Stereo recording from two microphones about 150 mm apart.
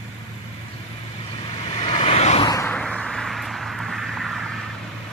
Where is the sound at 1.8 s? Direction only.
40° left (ahead or behind).